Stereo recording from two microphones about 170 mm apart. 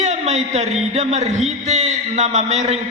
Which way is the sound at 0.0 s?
40° right (ahead or behind).